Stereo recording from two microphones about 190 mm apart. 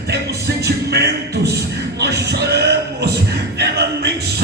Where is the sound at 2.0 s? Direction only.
60° right (ahead or behind).